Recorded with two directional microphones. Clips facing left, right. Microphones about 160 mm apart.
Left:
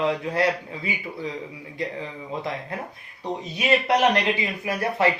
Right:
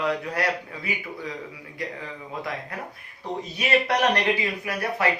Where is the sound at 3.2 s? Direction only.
20° left (ahead or behind).